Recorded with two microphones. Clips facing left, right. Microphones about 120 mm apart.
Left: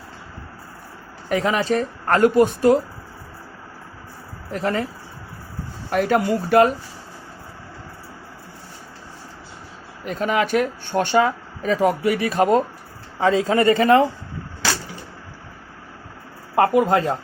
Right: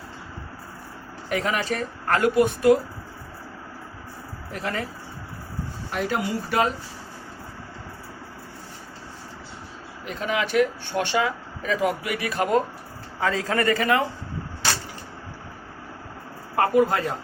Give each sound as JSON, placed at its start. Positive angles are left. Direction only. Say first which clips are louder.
{"t": 1.3, "sound": "speech", "louder": "left 5 dB", "side_deg": 35}
{"t": 4.5, "sound": "speech", "louder": "left 6 dB", "side_deg": 35}
{"t": 5.9, "sound": "speech", "louder": "left 8 dB", "side_deg": 50}
{"t": 10.1, "sound": "a man's voice", "louder": "left 5 dB", "side_deg": 45}
{"t": 16.6, "sound": "a man's voice", "louder": "left 3 dB", "side_deg": 25}